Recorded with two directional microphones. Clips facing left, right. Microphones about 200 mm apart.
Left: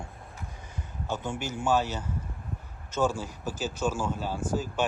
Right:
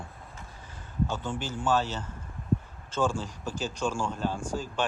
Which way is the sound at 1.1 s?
10° left (ahead or behind).